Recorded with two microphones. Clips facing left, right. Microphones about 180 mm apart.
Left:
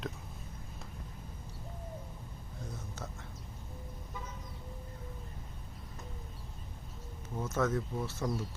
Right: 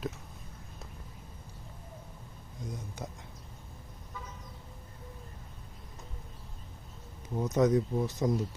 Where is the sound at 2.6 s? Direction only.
15° right (ahead or behind).